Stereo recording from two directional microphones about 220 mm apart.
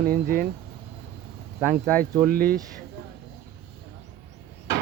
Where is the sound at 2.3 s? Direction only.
40° right (ahead or behind).